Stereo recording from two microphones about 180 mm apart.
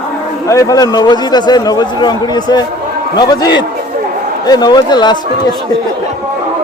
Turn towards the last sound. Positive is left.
turn(degrees=25)  # may be behind; listen again after turning